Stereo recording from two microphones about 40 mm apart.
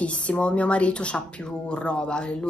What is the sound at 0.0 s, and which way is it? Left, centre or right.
A woman's voice, left.